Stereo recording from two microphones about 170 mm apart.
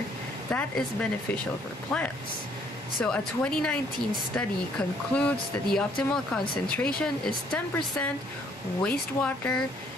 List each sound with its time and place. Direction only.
0.5 s speech: 10° left (ahead or behind)
1.9 s speech: 5° left (ahead or behind)